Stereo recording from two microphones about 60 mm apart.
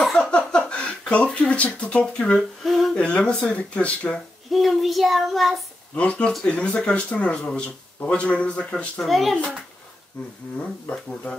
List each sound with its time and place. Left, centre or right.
0.1 s a sound: centre
2.6 s humming: centre
3.0 s speech: centre
4.5 s child singing: centre
5.9 s speech: centre
9.0 s child singing: centre
10.9 s speech: centre